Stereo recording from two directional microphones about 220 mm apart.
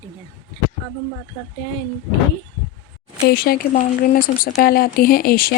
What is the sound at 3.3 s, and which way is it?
Speech, 45° left (ahead or behind).